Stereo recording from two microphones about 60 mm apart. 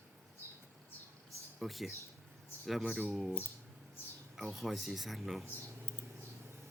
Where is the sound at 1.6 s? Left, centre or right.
Centre.